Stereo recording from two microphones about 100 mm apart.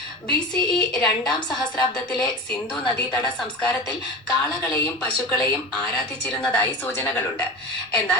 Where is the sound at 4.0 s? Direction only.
10° left (ahead or behind).